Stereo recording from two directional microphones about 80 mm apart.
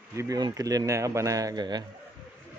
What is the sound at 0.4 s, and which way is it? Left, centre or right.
Speech, right.